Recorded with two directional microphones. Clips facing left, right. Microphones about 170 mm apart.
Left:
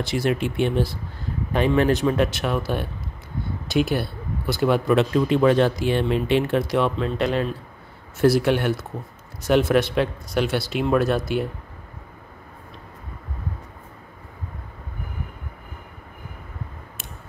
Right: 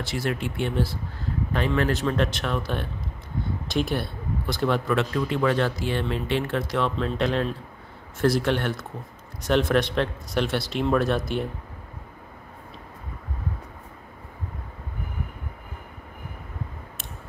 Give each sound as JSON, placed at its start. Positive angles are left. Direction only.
{"t": 0.0, "sound": "speech", "side_deg": 15}